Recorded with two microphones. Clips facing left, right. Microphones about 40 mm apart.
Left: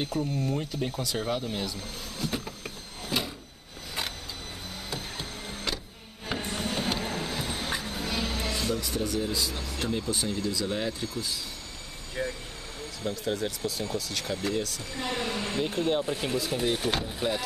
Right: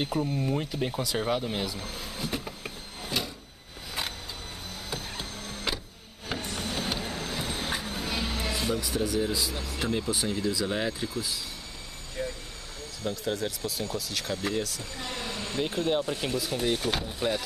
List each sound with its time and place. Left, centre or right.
0.0 s speech: centre
3.1 s a sound: centre
4.9 s printer: centre
5.7 s printer: centre
6.4 s vehicle: centre
7.3 s speech: centre
12.2 s vehicle: left
13.0 s speech: centre
14.8 s a sound: centre
15.7 s speech: centre